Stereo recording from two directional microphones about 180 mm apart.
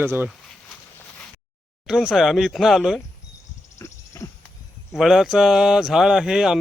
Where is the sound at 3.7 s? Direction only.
15° left (ahead or behind).